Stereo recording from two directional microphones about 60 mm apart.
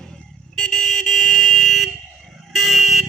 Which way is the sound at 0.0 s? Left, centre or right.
Centre.